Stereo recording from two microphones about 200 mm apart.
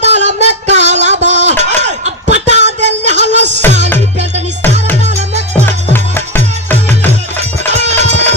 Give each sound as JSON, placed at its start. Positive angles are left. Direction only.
{"t": 0.0, "sound": "a sound", "side_deg": -35}
{"t": 2.0, "sound": "music", "side_deg": -35}
{"t": 5.9, "sound": "music", "side_deg": 10}
{"t": 7.9, "sound": "music", "side_deg": -35}